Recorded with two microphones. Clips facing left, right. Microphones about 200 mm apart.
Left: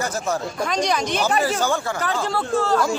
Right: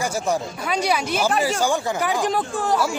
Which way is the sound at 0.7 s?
10° right (ahead or behind).